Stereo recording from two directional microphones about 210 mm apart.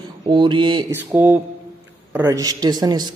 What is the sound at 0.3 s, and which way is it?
Speech, 20° right (ahead or behind).